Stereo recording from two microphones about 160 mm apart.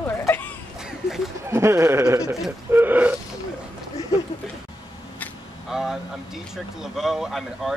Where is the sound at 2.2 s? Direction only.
5° right (ahead or behind).